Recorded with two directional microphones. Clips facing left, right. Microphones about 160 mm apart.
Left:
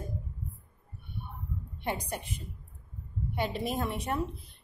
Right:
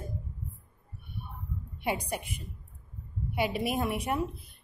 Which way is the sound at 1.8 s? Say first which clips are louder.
Right 3 dB; 10° right (ahead or behind).